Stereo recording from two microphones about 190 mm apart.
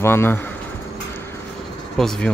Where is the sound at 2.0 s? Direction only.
Centre (ahead or behind).